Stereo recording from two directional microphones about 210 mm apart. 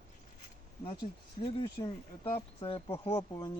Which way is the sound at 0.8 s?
25° left (ahead or behind).